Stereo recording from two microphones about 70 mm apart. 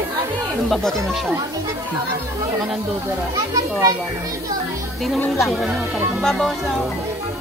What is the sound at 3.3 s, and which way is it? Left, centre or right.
Speech, right.